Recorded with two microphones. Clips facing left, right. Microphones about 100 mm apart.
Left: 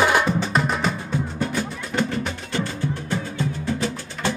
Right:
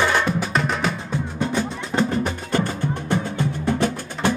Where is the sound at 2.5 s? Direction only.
55° right (ahead or behind).